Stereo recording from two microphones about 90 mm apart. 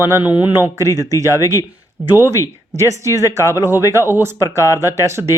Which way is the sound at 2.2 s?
30° right (ahead or behind).